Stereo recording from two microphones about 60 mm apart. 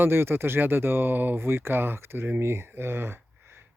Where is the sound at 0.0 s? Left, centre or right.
Right.